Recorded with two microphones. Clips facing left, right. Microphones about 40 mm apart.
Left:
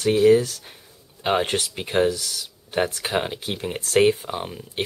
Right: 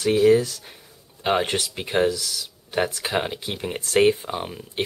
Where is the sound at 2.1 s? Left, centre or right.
Left.